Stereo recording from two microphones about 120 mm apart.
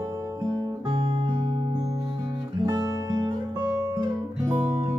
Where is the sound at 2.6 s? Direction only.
35° right (ahead or behind).